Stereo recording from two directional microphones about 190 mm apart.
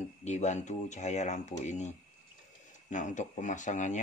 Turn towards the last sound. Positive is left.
turn(degrees=40)  # may be behind; listen again after turning